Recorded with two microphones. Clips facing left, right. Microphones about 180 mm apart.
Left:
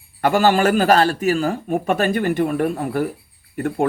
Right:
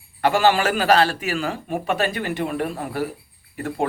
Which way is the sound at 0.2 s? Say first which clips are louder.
Left 2 dB; 45° left (ahead or behind).